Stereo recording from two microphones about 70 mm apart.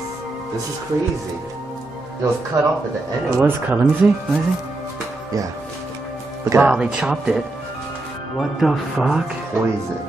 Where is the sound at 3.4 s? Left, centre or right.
Right.